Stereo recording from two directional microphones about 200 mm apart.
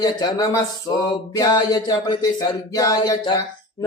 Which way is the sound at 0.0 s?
20° left (ahead or behind).